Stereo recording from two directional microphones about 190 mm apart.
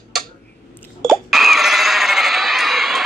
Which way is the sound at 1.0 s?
Centre (ahead or behind).